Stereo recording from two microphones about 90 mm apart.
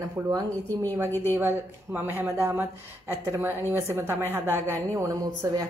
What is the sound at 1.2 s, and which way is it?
A woman's voice, 25° right (ahead or behind).